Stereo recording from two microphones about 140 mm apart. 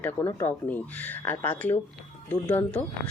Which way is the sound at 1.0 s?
20° left (ahead or behind).